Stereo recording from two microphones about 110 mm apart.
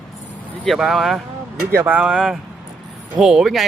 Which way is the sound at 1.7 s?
20° right (ahead or behind).